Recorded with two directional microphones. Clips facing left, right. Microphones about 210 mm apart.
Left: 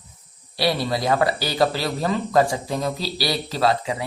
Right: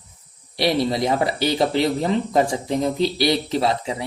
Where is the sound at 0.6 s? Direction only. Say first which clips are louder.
Right 3 dB; 20° right (ahead or behind).